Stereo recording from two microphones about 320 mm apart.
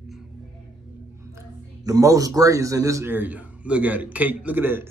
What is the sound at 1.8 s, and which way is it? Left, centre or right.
A man's voice, centre.